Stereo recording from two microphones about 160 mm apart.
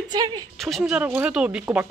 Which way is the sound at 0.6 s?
Centre (ahead or behind).